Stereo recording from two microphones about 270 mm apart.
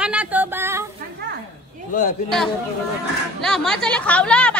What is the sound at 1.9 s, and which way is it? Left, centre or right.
Speech, left.